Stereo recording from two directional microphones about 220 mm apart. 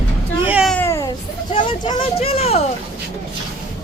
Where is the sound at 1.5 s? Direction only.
20° left (ahead or behind).